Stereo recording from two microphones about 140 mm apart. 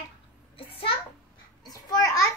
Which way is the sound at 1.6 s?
25° left (ahead or behind).